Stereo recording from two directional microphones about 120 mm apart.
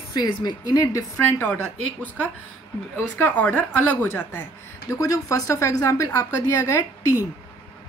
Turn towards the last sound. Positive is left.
turn(degrees=25)  # may be behind; listen again after turning